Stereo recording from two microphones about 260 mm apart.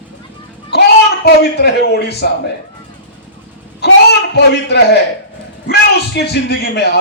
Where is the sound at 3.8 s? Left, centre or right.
Left.